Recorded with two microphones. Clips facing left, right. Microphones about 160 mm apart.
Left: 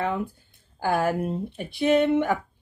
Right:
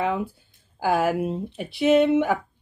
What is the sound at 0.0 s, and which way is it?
Speech, 10° right (ahead or behind).